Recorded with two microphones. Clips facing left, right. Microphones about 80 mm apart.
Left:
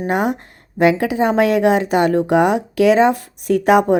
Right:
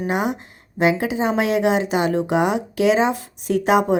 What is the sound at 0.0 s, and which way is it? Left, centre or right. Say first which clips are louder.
A woman's voice: left 3 dB; left.